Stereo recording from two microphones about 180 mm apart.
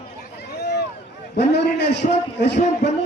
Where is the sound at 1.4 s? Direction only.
70° left (ahead or behind).